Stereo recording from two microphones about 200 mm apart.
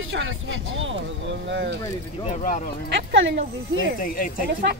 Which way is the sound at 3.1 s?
65° right (ahead or behind).